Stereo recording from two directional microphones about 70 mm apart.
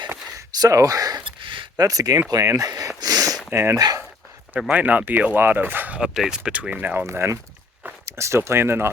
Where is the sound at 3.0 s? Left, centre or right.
Right.